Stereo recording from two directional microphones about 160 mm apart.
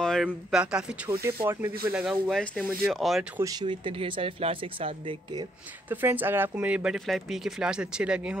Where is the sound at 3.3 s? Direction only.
25° right (ahead or behind).